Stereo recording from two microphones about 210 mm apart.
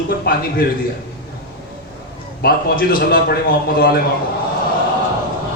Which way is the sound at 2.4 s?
45° left (ahead or behind).